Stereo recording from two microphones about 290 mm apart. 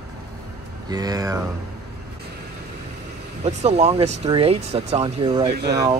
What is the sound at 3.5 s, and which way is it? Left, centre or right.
Speech, right.